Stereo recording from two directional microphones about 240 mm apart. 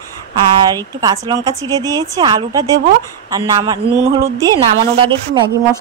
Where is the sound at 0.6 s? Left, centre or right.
Centre.